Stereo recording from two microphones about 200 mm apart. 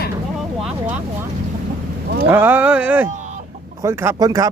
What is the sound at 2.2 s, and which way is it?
Speech, 10° right (ahead or behind).